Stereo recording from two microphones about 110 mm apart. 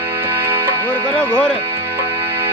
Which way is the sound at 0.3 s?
20° right (ahead or behind).